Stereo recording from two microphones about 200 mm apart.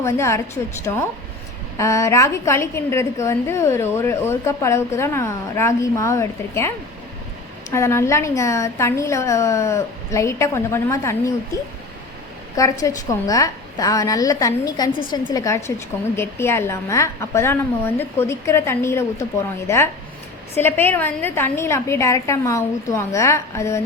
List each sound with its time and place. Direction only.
0.0 s a woman's voice: 15° left (ahead or behind)
12.5 s a woman's voice: 15° left (ahead or behind)